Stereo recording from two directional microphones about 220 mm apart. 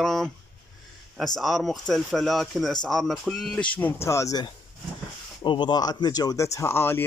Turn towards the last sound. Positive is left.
turn(degrees=10)  # may be behind; listen again after turning